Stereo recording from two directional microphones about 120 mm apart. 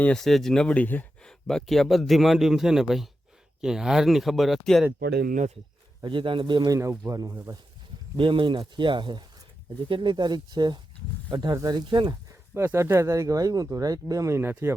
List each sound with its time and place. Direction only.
0.0 s speech: 5° left (ahead or behind)
6.0 s speech: 40° right (ahead or behind)
8.1 s speech: 45° right (ahead or behind)
12.5 s speech: 20° right (ahead or behind)